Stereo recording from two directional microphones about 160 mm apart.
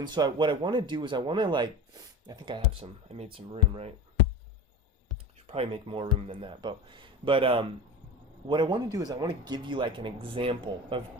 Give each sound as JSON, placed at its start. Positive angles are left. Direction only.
{"t": 0.0, "sound": "speech", "side_deg": -25}
{"t": 5.5, "sound": "speech", "side_deg": -35}